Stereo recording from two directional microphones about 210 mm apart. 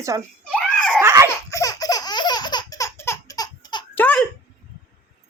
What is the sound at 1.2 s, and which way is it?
Laughter, 15° left (ahead or behind).